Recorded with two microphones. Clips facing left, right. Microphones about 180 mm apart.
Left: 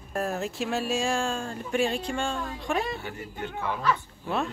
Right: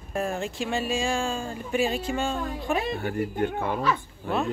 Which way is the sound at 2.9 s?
55° right (ahead or behind).